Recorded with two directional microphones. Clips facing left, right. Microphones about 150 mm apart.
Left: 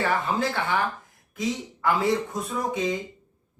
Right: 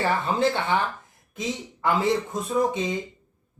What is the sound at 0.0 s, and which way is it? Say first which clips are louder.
A man's voice: right 2 dB; 25° right (ahead or behind).